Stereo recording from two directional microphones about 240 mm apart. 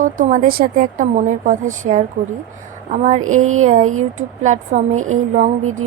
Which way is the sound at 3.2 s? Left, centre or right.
Right.